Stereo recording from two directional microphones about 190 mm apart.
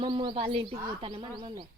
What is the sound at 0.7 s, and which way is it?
Speech, 20° right (ahead or behind).